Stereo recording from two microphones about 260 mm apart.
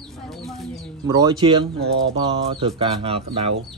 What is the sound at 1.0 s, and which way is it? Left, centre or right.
Speech, centre.